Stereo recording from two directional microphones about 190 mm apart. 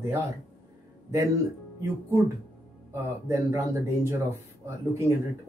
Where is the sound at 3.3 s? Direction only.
15° right (ahead or behind).